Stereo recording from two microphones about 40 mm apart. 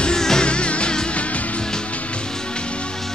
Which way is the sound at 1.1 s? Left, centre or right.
Left.